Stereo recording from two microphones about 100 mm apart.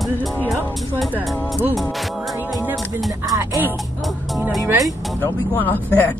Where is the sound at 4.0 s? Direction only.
Centre (ahead or behind).